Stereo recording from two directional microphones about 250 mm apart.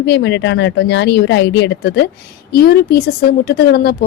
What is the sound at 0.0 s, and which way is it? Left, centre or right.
Speech, left.